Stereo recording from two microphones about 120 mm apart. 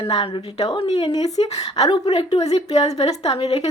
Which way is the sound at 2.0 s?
50° left (ahead or behind).